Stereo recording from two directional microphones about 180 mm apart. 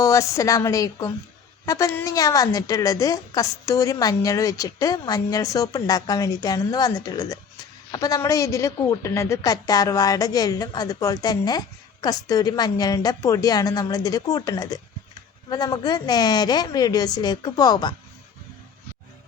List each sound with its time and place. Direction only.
0.0 s a woman's voice: 15° left (ahead or behind)